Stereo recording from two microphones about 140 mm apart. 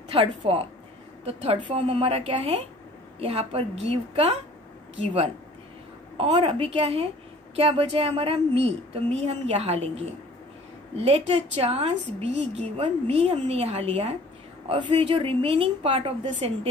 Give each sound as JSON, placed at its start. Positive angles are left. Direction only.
{"t": 0.1, "sound": "a woman's voice", "side_deg": -40}